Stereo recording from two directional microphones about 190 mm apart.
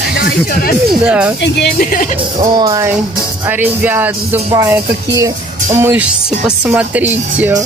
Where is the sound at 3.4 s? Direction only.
10° right (ahead or behind).